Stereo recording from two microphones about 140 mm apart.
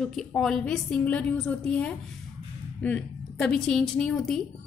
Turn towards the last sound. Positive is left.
turn(degrees=0)  # may be behind; listen again after turning